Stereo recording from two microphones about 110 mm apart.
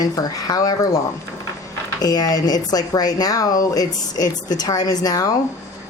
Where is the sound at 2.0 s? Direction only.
35° left (ahead or behind).